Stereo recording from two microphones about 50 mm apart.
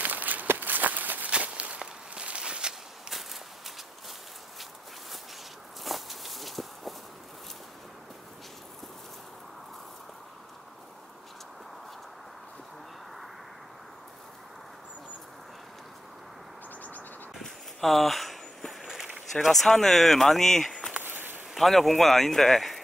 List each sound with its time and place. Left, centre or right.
0.0 s walk: right
1.4 s walk: right
3.1 s walk: centre
5.9 s walk: centre
17.4 s a sound: centre
19.4 s speech: centre
21.0 s a sound: right
21.5 s speech: centre